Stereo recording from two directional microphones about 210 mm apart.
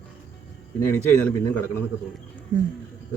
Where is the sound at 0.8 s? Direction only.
10° left (ahead or behind).